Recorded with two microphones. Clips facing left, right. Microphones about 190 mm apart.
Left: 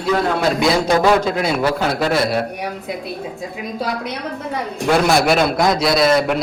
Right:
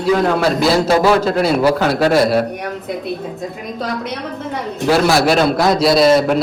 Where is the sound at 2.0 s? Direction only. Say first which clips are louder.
Right 6 dB; 40° right (ahead or behind).